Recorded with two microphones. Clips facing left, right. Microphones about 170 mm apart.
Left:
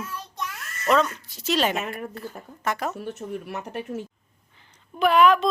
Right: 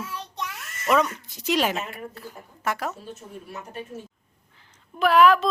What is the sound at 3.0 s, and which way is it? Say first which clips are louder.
Speech: left 7 dB; 70° left (ahead or behind).